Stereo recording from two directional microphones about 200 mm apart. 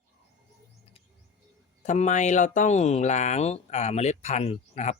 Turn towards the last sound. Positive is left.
turn(degrees=30)  # may be behind; listen again after turning